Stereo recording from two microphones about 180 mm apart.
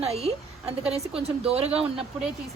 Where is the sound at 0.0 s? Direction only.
35° right (ahead or behind).